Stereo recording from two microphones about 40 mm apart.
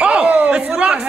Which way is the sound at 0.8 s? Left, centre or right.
Right.